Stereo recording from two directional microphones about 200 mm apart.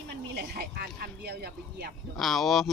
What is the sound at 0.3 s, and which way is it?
Speech, 50° right (ahead or behind).